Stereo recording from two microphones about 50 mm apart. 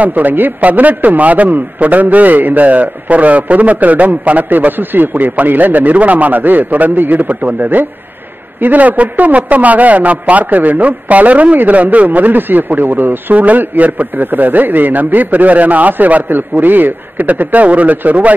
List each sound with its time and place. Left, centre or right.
0.0 s a man's voice: right